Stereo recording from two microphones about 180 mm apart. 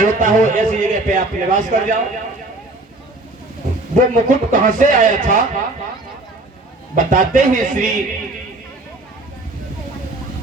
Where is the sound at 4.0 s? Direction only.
45° right (ahead or behind).